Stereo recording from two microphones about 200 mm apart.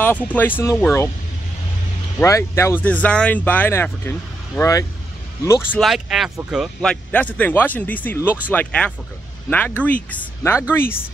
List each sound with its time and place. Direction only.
0.0 s speech: 10° left (ahead or behind)
2.1 s speech: 15° left (ahead or behind)
5.8 s speech: centre (ahead or behind)
10.7 s speech: 10° left (ahead or behind)